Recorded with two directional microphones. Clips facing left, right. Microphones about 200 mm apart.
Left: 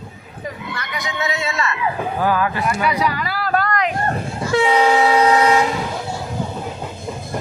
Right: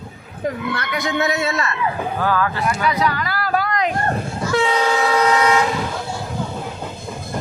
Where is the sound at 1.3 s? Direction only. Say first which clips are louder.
Right 2 dB; 40° right (ahead or behind).